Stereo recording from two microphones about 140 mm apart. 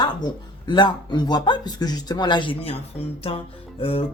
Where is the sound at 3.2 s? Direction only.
45° left (ahead or behind).